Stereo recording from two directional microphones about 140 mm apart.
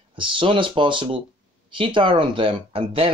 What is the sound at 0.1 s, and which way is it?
Speech, 35° right (ahead or behind).